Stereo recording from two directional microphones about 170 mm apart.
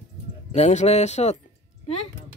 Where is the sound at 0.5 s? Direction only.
40° left (ahead or behind).